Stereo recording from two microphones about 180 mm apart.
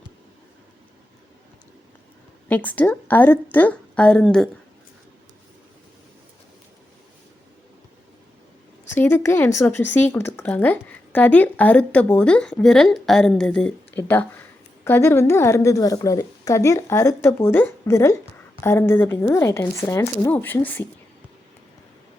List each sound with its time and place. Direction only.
2.5 s speech: 10° left (ahead or behind)
8.9 s speech: 10° left (ahead or behind)